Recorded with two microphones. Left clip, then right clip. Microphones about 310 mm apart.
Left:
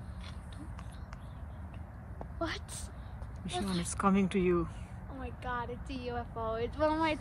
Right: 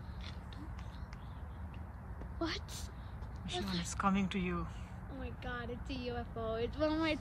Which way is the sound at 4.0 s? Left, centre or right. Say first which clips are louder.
Left 6 dB; centre.